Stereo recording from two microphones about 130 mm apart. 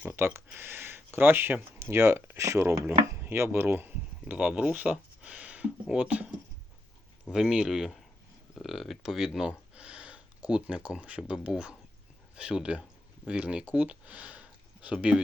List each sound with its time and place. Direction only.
0.1 s speech: 20° right (ahead or behind)
7.3 s speech: 5° right (ahead or behind)